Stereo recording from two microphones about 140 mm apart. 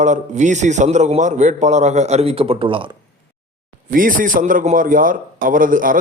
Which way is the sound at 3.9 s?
80° right.